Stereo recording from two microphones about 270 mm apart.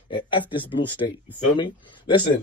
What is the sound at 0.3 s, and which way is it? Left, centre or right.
Speech, centre.